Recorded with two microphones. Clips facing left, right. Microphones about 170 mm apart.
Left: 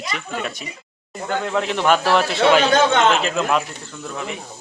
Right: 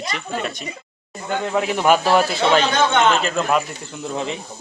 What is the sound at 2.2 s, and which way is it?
Speech, centre (ahead or behind).